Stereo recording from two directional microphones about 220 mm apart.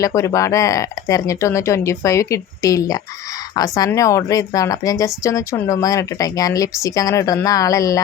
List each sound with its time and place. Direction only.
0.0 s a woman's voice: 15° left (ahead or behind)